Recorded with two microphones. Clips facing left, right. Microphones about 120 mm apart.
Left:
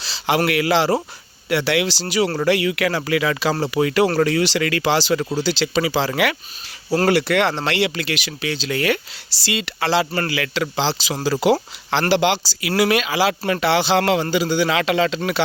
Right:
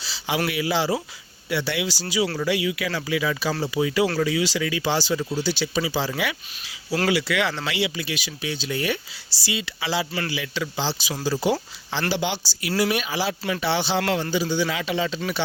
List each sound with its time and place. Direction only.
0.0 s a sound: 80° left
0.3 s speech: 75° left (ahead or behind)
7.1 s speech: 65° left (ahead or behind); by 9.0 s 90° left
9.4 s speech: 70° left (ahead or behind)
10.2 s speech: 90° left